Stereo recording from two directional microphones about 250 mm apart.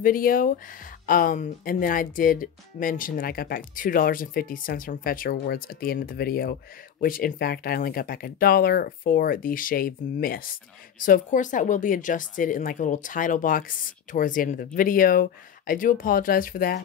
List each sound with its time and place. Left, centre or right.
0.0 s speech: left